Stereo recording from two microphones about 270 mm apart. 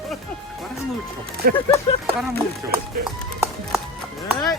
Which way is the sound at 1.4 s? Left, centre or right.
Right.